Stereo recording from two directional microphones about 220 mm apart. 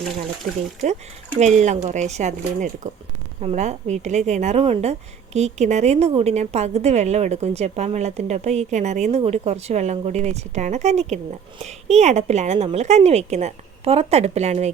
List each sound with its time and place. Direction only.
1.4 s a woman's voice: 30° right (ahead or behind)